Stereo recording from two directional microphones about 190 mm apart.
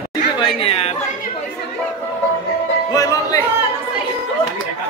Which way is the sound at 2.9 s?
20° left (ahead or behind).